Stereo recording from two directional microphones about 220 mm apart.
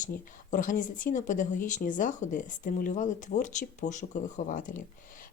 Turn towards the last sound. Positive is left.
turn(degrees=35)  # may be behind; listen again after turning